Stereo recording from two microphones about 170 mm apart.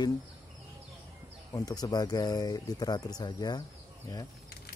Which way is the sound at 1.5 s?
20° left (ahead or behind).